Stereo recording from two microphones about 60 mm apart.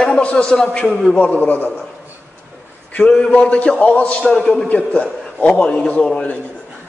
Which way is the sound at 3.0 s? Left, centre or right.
Centre.